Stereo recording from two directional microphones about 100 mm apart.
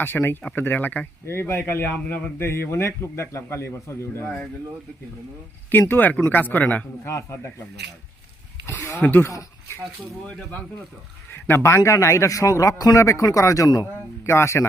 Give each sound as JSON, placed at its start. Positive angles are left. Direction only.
{"t": 0.0, "sound": "a man's voice", "side_deg": 20}
{"t": 5.9, "sound": "speech", "side_deg": 20}
{"t": 7.1, "sound": "a man's voice", "side_deg": 30}
{"t": 8.6, "sound": "a man's voice", "side_deg": 25}
{"t": 11.4, "sound": "a man's voice", "side_deg": 25}